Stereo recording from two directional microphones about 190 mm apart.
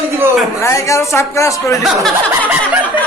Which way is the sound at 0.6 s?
15° left (ahead or behind).